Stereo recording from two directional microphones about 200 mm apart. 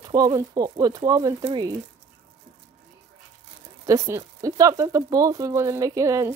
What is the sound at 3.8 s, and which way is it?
Speech, 15° right (ahead or behind).